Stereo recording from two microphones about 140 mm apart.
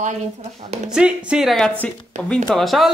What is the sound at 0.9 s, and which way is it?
Speech, 5° right (ahead or behind).